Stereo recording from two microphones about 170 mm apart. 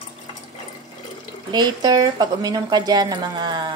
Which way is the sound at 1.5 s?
25° right (ahead or behind).